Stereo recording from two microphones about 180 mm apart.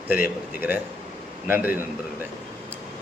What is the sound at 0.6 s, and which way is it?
Speech, 10° right (ahead or behind).